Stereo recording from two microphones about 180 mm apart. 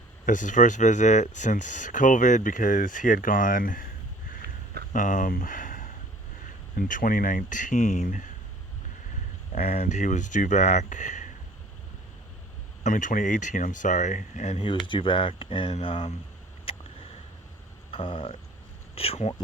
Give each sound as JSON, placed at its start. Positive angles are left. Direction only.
{"t": 0.3, "sound": "speech", "side_deg": 45}
{"t": 4.4, "sound": "a sound", "side_deg": -60}
{"t": 4.9, "sound": "speech", "side_deg": 45}
{"t": 9.6, "sound": "speech", "side_deg": 40}
{"t": 12.8, "sound": "speech", "side_deg": 45}
{"t": 16.7, "sound": "a sound", "side_deg": 30}
{"t": 17.9, "sound": "speech", "side_deg": 30}